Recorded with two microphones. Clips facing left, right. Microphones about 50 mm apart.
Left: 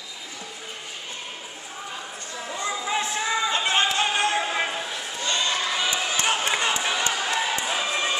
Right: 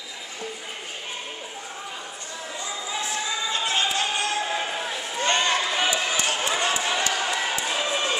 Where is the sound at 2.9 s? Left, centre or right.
Left.